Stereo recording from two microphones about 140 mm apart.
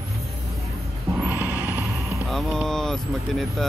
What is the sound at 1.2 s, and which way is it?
Vehicle, 15° right (ahead or behind).